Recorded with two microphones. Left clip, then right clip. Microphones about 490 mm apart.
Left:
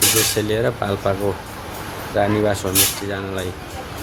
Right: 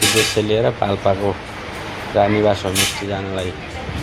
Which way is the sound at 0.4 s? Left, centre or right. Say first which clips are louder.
Right 3 dB; left.